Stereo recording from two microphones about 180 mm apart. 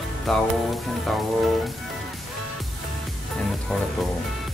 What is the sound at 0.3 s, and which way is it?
Speech, centre (ahead or behind).